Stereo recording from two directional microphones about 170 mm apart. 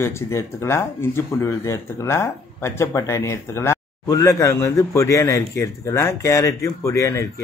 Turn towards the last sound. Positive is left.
turn(degrees=15)  # may be behind; listen again after turning